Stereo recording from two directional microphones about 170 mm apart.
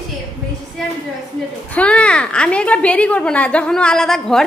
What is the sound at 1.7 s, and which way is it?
A woman's voice, 5° left (ahead or behind).